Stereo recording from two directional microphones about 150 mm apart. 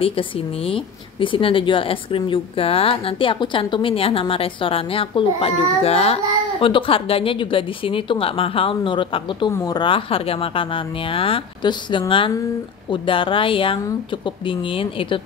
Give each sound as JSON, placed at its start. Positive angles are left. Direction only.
{"t": 0.7, "sound": "a woman's voice", "side_deg": 35}
{"t": 9.5, "sound": "a woman's voice", "side_deg": 15}
{"t": 9.8, "sound": "a woman's voice", "side_deg": 35}